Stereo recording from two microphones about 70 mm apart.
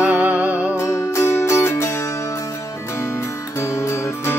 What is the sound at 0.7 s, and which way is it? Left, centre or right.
Music, left.